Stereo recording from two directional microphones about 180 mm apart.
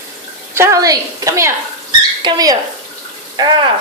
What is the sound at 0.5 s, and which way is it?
A woman's voice, 15° right (ahead or behind).